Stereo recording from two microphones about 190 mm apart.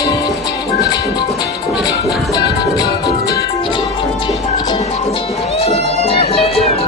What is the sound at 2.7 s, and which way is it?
Music, 20° left (ahead or behind).